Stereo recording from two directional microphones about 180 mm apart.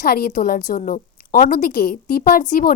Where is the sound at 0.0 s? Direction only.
55° left (ahead or behind).